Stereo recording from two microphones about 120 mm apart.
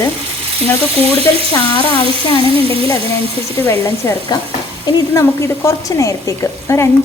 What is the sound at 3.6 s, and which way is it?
Speech, 20° left (ahead or behind).